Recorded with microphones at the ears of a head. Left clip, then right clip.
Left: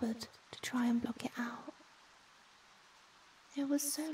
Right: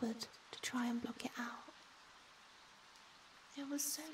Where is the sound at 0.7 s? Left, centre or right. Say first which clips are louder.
Left 7 dB; left.